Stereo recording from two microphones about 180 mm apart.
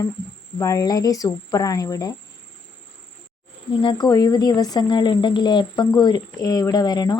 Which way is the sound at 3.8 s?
25° left (ahead or behind).